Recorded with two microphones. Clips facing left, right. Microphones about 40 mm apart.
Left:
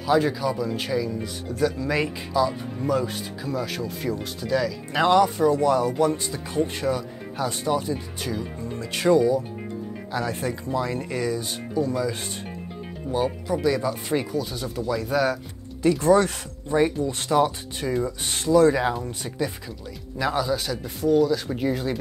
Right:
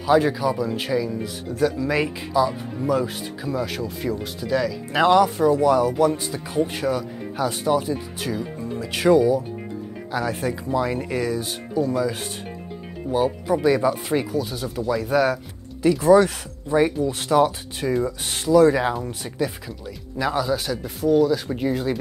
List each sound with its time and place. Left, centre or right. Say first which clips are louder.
0.0 s speech: right 3 dB; centre
13.5 s speech: right 6 dB; centre
14.0 s speech: right 2 dB; centre